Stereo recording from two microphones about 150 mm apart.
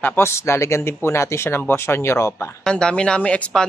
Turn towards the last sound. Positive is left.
turn(degrees=5)  # may be behind; listen again after turning